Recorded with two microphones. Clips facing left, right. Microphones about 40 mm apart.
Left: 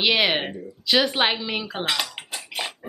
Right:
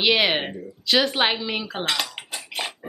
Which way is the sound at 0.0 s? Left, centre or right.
Centre.